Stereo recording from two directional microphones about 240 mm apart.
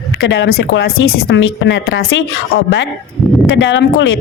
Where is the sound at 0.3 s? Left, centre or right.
Left.